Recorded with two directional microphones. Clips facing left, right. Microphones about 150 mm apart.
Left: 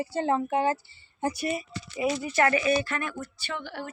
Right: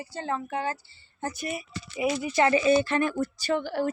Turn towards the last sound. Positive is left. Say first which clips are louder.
# right 9 dB
turn(degrees=-40)  # may be behind; listen again after turning